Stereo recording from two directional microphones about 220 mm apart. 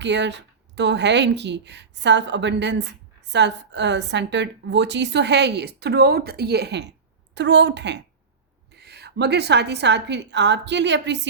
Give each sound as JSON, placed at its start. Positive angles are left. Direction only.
{"t": 0.0, "sound": "a woman's voice", "side_deg": -55}